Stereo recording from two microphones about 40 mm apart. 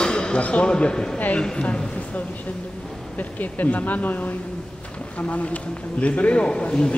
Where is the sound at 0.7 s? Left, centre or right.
Left.